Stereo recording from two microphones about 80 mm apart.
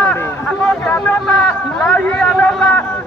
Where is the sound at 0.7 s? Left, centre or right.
Centre.